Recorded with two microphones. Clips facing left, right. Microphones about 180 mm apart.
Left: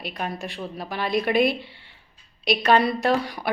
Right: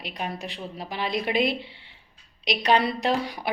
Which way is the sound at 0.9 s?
50° left (ahead or behind).